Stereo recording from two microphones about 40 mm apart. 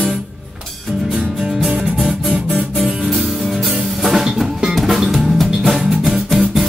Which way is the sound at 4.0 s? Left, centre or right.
Centre.